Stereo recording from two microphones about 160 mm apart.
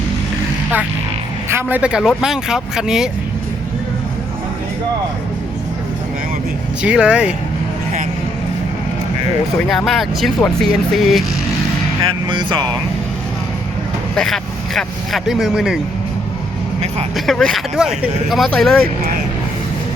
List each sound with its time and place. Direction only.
1.5 s speech: 15° right (ahead or behind)
6.8 s speech: 5° right (ahead or behind)
9.6 s speech: centre (ahead or behind)
12.0 s music: 30° right (ahead or behind)
14.2 s speech: 5° left (ahead or behind)
17.2 s speech: 5° left (ahead or behind)